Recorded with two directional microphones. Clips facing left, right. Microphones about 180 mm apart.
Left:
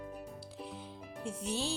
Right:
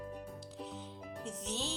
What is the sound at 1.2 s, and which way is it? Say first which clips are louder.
Music: left 4 dB; 10° left (ahead or behind).